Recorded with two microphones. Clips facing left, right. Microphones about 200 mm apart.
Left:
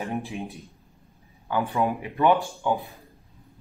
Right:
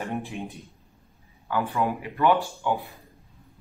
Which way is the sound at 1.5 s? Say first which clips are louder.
Left 1 dB; 15° left (ahead or behind).